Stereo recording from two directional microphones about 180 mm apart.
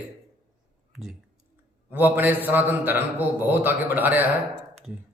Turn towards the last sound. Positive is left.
turn(degrees=-10)  # may be behind; listen again after turning